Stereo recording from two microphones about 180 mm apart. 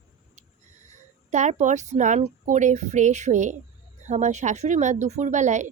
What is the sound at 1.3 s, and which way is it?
Speech, 40° right (ahead or behind).